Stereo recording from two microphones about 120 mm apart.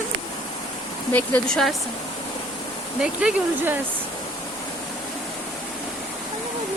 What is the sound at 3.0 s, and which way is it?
Speech, 10° right (ahead or behind).